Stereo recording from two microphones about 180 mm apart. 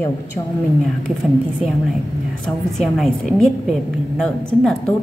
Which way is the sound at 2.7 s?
Centre (ahead or behind).